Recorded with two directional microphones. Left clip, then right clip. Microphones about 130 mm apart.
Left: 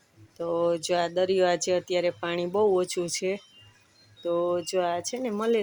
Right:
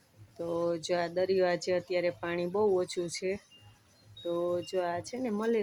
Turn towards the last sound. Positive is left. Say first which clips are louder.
# left 5 dB
turn(degrees=20)  # may be behind; listen again after turning